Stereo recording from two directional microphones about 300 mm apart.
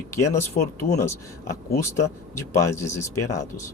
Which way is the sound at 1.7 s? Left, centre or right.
Centre.